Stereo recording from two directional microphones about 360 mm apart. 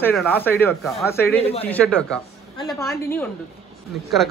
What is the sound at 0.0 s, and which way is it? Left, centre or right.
A man's voice, centre.